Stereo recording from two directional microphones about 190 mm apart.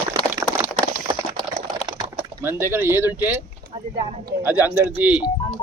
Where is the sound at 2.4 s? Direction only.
10° right (ahead or behind).